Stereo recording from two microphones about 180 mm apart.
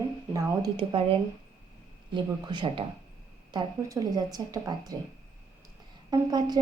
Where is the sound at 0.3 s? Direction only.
25° right (ahead or behind).